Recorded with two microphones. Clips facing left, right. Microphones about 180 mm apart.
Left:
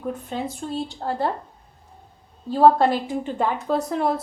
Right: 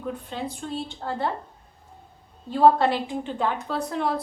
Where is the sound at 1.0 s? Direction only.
35° left (ahead or behind).